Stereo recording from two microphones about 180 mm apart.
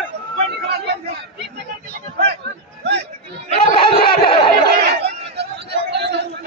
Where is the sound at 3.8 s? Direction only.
30° left (ahead or behind).